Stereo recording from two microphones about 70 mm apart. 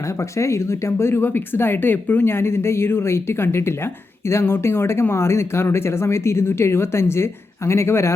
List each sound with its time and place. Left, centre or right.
0.3 s speech: left